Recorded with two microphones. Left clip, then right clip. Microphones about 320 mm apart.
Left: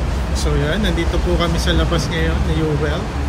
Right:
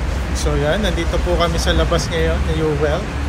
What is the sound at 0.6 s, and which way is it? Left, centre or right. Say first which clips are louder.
Speech: right 3 dB; centre.